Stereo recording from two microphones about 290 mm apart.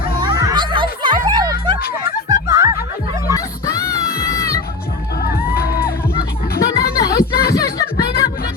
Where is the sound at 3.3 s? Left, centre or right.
Centre.